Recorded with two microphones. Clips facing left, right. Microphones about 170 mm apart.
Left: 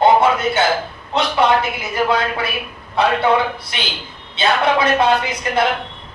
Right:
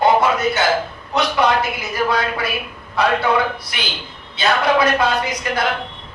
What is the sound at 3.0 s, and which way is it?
Speech, 25° left (ahead or behind).